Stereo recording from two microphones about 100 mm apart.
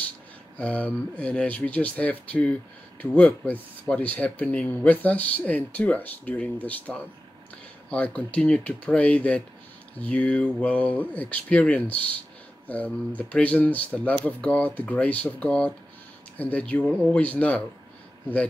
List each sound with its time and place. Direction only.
0.6 s speech: 15° left (ahead or behind)